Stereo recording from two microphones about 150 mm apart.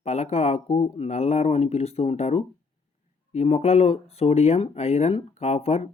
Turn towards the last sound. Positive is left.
turn(degrees=45)  # may be behind; listen again after turning